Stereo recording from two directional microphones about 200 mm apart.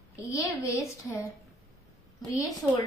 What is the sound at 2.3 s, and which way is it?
Speech, 20° left (ahead or behind).